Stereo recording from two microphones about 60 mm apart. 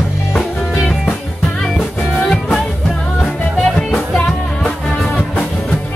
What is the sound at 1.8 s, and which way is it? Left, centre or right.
Music, centre.